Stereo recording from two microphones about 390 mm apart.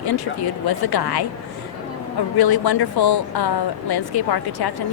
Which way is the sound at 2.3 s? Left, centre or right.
Left.